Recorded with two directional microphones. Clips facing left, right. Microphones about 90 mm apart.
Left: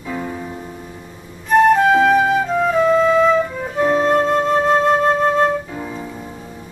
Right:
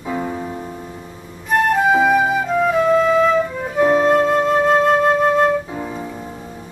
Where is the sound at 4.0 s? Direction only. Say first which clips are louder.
Right 1 dB; 5° right (ahead or behind).